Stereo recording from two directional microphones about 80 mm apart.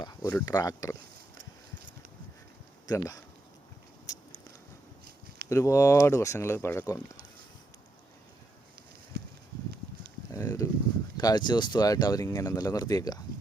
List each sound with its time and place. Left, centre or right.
0.0 s speech: left
2.8 s speech: left
5.5 s speech: left
10.3 s a sound: left
11.2 s speech: left